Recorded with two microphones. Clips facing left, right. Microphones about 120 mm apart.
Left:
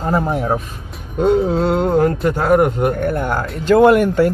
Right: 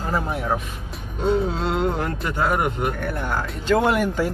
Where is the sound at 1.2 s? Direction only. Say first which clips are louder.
Left 7 dB; 60° left (ahead or behind).